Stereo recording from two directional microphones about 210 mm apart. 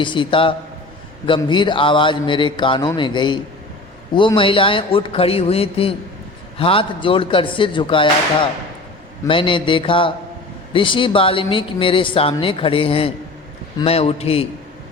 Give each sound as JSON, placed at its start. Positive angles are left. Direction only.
{"t": 0.0, "sound": "speech", "side_deg": 25}
{"t": 9.2, "sound": "speech", "side_deg": 25}